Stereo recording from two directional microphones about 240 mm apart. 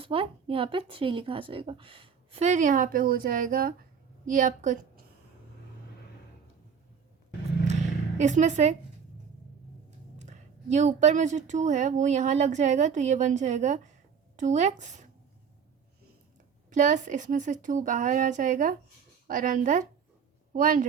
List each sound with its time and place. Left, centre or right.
0.0 s a woman's voice: right
8.2 s speech: right
10.2 s speech: right
16.6 s a woman's voice: right